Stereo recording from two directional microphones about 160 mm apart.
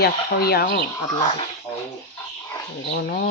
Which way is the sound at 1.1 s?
35° left (ahead or behind).